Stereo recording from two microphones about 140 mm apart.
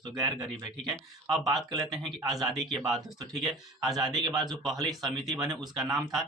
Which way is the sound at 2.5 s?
Centre (ahead or behind).